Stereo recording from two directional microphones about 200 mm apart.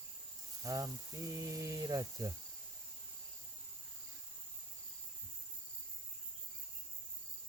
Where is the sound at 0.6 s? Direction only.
15° right (ahead or behind).